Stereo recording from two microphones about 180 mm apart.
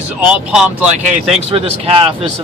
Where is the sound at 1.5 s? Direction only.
30° right (ahead or behind).